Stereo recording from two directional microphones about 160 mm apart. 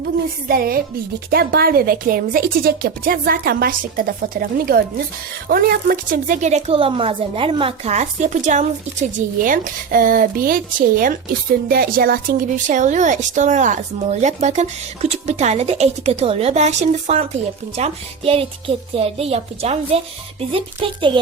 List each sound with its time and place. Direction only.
0.0 s a woman's voice: 70° right (ahead or behind); by 21.1 s 35° right (ahead or behind)